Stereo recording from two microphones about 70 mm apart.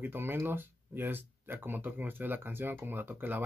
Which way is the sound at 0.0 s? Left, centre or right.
Right.